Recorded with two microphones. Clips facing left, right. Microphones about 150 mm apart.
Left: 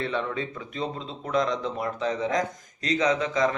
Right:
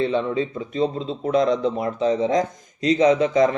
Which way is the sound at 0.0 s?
20° right (ahead or behind).